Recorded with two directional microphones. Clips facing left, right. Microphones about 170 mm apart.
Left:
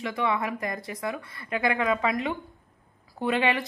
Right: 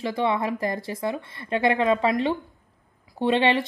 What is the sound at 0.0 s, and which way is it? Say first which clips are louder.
Speech: right 3 dB; 30° right (ahead or behind).